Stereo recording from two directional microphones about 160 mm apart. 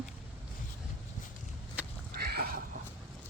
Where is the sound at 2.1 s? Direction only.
75° right (ahead or behind).